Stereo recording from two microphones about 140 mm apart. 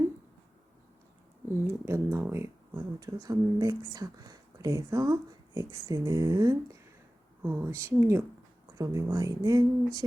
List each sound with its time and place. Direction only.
1.5 s speech: 20° right (ahead or behind)